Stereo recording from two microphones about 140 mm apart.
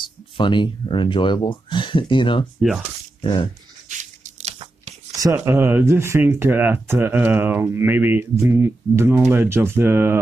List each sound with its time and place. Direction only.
0.0 s speech: 35° left (ahead or behind)
3.9 s crunch: 60° right (ahead or behind)
5.1 s speech: 20° right (ahead or behind)